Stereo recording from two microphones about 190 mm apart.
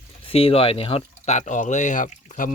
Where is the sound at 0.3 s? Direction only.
30° left (ahead or behind).